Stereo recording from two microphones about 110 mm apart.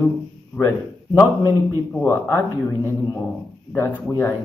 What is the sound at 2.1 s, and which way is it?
Speech, 20° left (ahead or behind).